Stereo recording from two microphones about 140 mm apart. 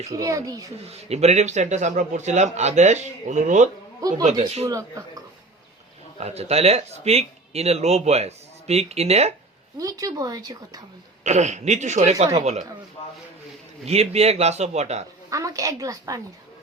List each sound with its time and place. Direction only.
0.1 s speech: 25° right (ahead or behind)
0.9 s a man's voice: 50° right (ahead or behind)
4.3 s speech: 50° right (ahead or behind)
4.6 s speech: 20° right (ahead or behind)
6.1 s speech: 50° right (ahead or behind)
9.7 s speech: 25° right (ahead or behind)
11.2 s a man's voice: 55° right (ahead or behind)
13.8 s speech: 50° right (ahead or behind)
15.3 s speech: 25° right (ahead or behind)